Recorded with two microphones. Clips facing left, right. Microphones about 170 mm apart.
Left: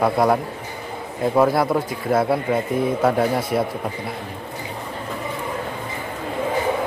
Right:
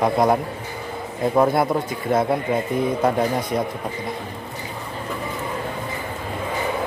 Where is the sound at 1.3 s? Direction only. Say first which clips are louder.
Left 1 dB; centre (ahead or behind).